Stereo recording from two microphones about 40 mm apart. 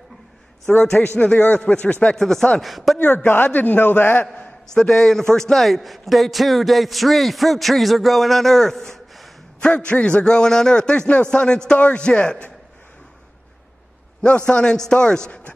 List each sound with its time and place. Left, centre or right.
0.7 s a man's voice: left
1.1 s a man's voice: left
2.1 s a man's voice: centre
3.0 s a man's voice: left
3.3 s a man's voice: left
4.7 s a man's voice: centre
9.6 s a man's voice: left
14.2 s a man's voice: left